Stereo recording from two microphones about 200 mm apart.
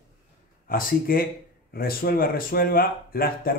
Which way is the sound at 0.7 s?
45° left (ahead or behind).